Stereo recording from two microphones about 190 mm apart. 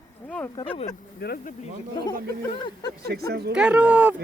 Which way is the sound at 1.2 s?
55° left (ahead or behind).